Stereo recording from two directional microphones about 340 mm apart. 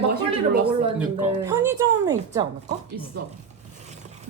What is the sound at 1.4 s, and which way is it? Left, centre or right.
Speech, centre.